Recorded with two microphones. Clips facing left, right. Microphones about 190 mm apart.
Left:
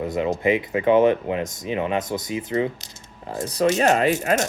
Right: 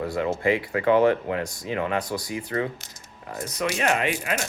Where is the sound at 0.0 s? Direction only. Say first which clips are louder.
Left 2 dB; 20° left (ahead or behind).